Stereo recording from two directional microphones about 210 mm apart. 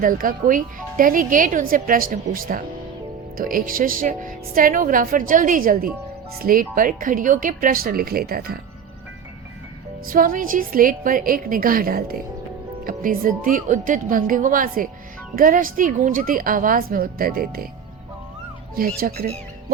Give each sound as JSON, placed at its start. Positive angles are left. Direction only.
{"t": 0.0, "sound": "speech", "side_deg": -40}
{"t": 10.1, "sound": "speech", "side_deg": -40}
{"t": 18.8, "sound": "speech", "side_deg": -45}